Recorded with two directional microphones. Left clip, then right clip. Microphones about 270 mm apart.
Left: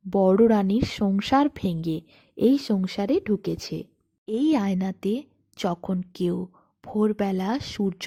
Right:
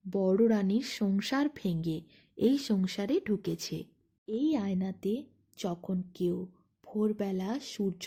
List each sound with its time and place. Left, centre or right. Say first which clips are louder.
0.1 s speech: left 8 dB; left
4.3 s speech: left 8 dB; left